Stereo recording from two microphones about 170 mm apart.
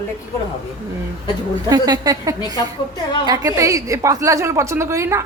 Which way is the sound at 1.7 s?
25° right (ahead or behind).